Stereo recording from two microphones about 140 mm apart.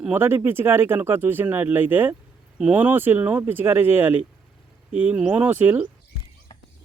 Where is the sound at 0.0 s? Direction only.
15° right (ahead or behind).